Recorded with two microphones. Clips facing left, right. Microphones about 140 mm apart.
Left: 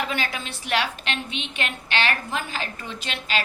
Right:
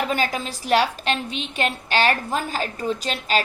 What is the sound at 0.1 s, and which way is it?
A woman's voice, 40° right (ahead or behind).